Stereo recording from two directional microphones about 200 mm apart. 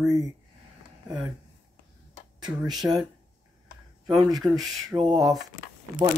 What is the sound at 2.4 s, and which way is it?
Speech, 20° right (ahead or behind).